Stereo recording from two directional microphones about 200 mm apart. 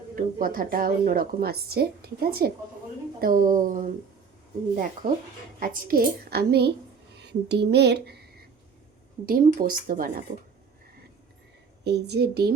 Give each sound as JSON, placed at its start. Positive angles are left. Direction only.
{"t": 0.2, "sound": "a woman's voice", "side_deg": -45}
{"t": 5.5, "sound": "a woman's voice", "side_deg": -45}
{"t": 11.9, "sound": "speech", "side_deg": -55}